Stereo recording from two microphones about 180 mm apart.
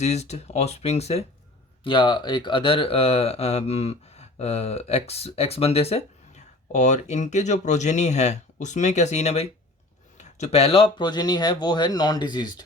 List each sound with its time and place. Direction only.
0.0 s speech: 35° left (ahead or behind)